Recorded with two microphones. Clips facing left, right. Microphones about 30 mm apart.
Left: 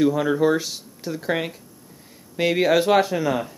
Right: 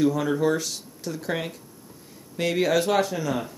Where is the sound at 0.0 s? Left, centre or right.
Centre.